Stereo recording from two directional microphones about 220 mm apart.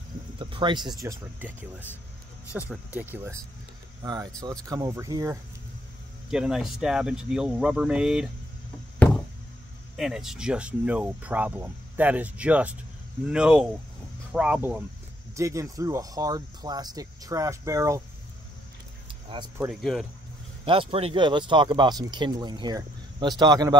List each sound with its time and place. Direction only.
0.4 s speech: 20° right (ahead or behind)
2.7 s speech: 10° right (ahead or behind)
6.3 s speech: 5° right (ahead or behind)
9.9 s speech: centre (ahead or behind)
19.6 s speech: centre (ahead or behind)
20.6 s speech: 25° right (ahead or behind)